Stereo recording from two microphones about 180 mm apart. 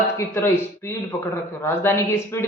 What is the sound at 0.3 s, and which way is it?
Speech, 15° left (ahead or behind).